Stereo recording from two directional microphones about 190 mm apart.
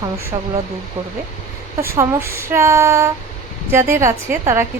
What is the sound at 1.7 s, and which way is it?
Speech, 15° right (ahead or behind).